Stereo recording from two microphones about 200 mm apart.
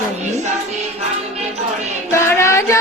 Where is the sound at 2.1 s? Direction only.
15° left (ahead or behind).